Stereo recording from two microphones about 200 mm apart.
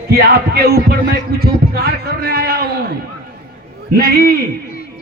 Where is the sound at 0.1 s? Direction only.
50° right (ahead or behind).